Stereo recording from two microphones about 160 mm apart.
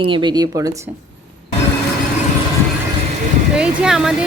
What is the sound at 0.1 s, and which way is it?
Speech, 25° right (ahead or behind).